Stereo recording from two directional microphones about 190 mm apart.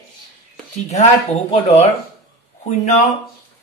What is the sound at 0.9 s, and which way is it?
Speech, 35° left (ahead or behind).